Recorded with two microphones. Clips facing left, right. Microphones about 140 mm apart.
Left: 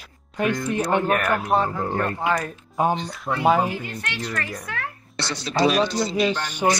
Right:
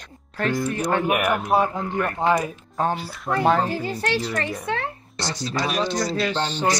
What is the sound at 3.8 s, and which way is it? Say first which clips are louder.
Speech: right 7 dB; 35° right (ahead or behind).